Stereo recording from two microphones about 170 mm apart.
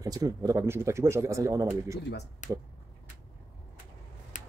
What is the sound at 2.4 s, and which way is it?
Speech, 45° left (ahead or behind).